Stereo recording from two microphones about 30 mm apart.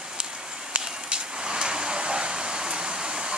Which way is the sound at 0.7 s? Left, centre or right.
Right.